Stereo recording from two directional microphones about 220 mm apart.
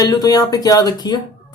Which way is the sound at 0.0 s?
15° left (ahead or behind).